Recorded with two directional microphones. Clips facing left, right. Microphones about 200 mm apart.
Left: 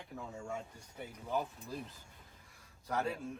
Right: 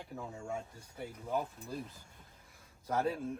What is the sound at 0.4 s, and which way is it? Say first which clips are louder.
Speech: right 2 dB; 5° right (ahead or behind).